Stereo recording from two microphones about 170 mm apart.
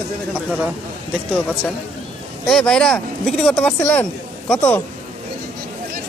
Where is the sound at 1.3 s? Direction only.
10° left (ahead or behind).